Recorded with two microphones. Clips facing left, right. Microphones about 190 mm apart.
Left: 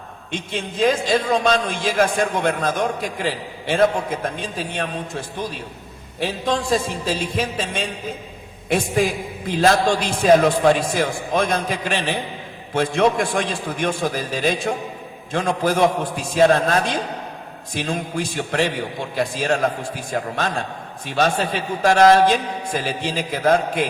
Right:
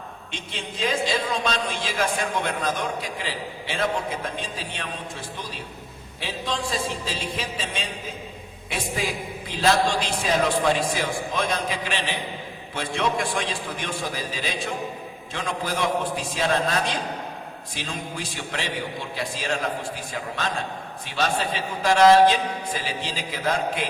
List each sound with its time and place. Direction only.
0.3 s a man's voice: 50° left (ahead or behind)
6.1 s a man's voice: 50° left (ahead or behind)
9.6 s a man's voice: 50° left (ahead or behind)